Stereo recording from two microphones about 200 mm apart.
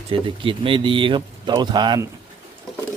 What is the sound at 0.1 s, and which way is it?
Speech, 25° right (ahead or behind).